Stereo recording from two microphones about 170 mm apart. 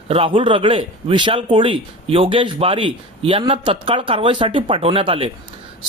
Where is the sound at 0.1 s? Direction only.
30° right (ahead or behind).